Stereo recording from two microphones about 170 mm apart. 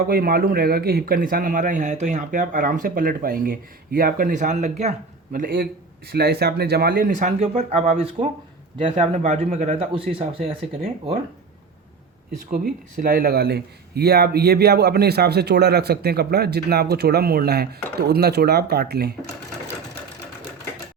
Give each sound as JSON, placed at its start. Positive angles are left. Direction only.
{"t": 0.1, "sound": "a man's voice", "side_deg": -60}
{"t": 6.1, "sound": "speech", "side_deg": -70}
{"t": 12.5, "sound": "speech", "side_deg": -60}